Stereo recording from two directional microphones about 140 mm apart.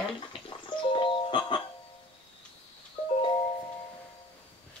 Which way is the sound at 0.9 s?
35° left (ahead or behind).